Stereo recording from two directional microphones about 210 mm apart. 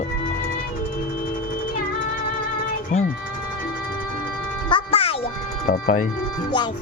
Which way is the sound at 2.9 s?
35° left (ahead or behind).